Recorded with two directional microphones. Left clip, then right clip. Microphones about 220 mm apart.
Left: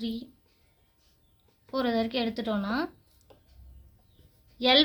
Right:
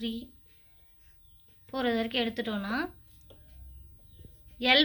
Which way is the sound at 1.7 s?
45° left (ahead or behind).